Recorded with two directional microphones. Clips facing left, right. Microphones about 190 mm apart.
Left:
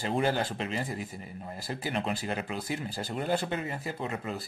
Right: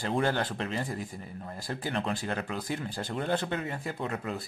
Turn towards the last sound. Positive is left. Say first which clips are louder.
# right 1 dB
turn(degrees=0)  # may be behind; listen again after turning